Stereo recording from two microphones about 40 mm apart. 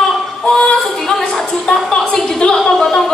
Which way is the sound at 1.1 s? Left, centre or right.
Centre.